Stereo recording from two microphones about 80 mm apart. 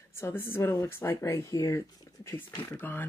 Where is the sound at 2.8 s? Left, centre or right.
Left.